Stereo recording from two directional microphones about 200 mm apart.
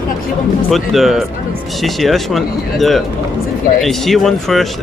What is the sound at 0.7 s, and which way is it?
Speech, centre (ahead or behind).